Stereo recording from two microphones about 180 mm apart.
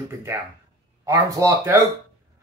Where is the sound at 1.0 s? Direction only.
20° right (ahead or behind).